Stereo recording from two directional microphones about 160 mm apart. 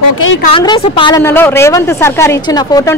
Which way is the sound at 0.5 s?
30° left (ahead or behind).